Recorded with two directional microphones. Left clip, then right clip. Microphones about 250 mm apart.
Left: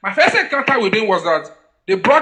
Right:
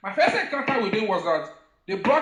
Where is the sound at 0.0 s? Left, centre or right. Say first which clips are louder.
Left 8 dB; left.